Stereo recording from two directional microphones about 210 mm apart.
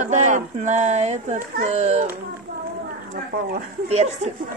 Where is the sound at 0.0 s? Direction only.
35° right (ahead or behind).